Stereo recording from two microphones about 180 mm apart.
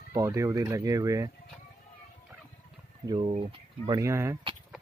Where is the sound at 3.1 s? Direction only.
30° right (ahead or behind).